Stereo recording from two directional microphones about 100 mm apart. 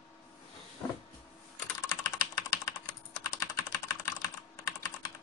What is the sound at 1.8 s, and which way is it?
Typing, 40° left (ahead or behind).